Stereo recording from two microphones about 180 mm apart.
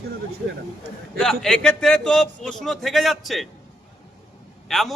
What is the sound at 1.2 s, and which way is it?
Speech, 5° left (ahead or behind).